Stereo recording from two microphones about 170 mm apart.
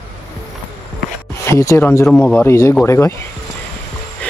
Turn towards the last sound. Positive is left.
turn(degrees=5)  # may be behind; listen again after turning